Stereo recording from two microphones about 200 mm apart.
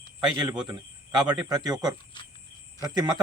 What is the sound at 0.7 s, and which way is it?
Speech, 20° right (ahead or behind).